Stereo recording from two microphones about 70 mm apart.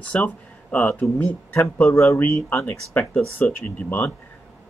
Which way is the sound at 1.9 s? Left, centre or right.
Left.